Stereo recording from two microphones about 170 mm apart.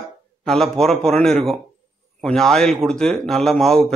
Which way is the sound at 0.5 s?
5° left (ahead or behind).